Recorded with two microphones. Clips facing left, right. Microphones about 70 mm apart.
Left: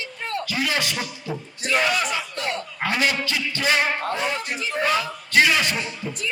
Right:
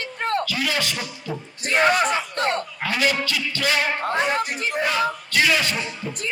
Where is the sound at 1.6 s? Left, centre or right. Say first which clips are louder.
Right 4 dB; right.